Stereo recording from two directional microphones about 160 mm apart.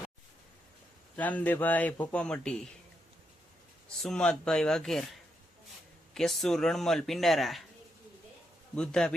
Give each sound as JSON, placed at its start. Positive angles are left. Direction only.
{"t": 1.1, "sound": "a man's voice", "side_deg": 10}
{"t": 4.0, "sound": "a man's voice", "side_deg": 5}
{"t": 6.1, "sound": "a man's voice", "side_deg": 0}
{"t": 8.7, "sound": "a man's voice", "side_deg": 5}